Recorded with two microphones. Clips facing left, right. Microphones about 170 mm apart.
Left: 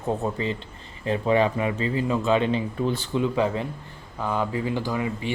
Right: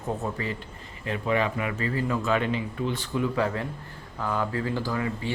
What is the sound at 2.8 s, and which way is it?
Speech, 35° left (ahead or behind).